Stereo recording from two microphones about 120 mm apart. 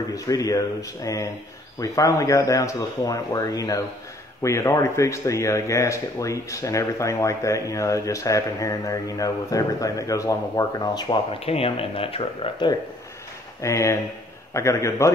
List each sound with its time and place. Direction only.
0.1 s speech: 30° left (ahead or behind)
11.3 s speech: 55° left (ahead or behind)
13.6 s speech: 25° left (ahead or behind)